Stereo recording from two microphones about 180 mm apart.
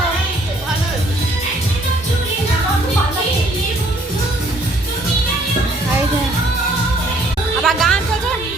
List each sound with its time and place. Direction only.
7.6 s music: centre (ahead or behind)